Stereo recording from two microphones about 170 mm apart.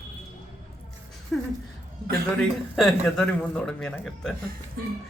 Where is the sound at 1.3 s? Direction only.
5° left (ahead or behind).